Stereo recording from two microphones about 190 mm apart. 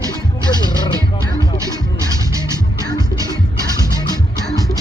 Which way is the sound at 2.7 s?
20° left (ahead or behind).